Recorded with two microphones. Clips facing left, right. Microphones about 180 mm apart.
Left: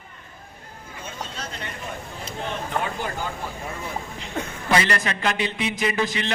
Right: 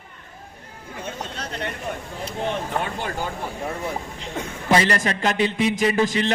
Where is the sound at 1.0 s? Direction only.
60° right (ahead or behind).